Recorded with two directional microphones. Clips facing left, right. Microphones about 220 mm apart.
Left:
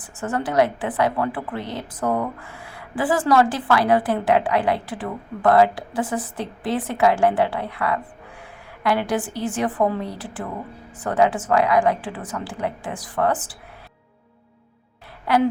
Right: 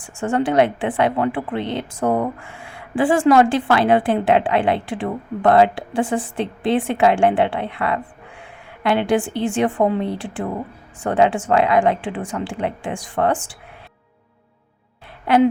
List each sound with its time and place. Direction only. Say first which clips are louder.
0.0 s a woman's voice: right 5 dB; 25° right (ahead or behind)
15.3 s a woman's voice: right 4 dB; 25° right (ahead or behind)